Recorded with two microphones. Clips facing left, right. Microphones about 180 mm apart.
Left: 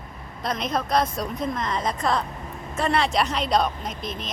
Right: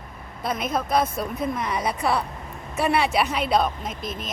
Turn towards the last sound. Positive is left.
turn(degrees=-5)  # may be behind; listen again after turning